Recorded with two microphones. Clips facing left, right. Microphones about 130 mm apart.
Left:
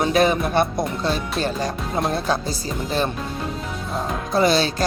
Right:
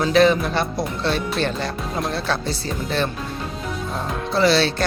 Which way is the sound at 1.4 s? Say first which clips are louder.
Even; 40° left (ahead or behind).